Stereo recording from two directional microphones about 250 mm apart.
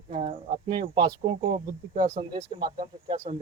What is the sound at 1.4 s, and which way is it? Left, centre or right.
Speech, right.